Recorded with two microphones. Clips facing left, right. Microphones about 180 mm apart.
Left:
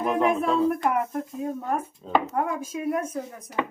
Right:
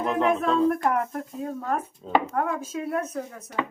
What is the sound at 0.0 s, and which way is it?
Speech, 10° left (ahead or behind).